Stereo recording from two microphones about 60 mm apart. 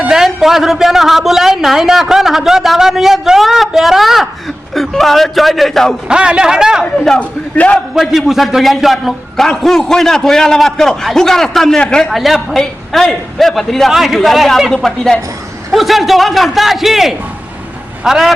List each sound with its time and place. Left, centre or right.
0.1 s a man's voice: centre
6.1 s a man's voice: centre
7.2 s a man's voice: left
7.9 s a man's voice: centre
12.1 s a man's voice: centre